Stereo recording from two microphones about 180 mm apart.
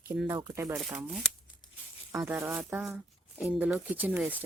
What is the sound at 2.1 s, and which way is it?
Speech, 15° right (ahead or behind).